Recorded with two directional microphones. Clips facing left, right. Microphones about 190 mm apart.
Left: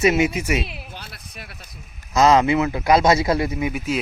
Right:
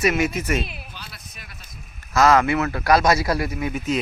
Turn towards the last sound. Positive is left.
turn(degrees=25)  # may be behind; listen again after turning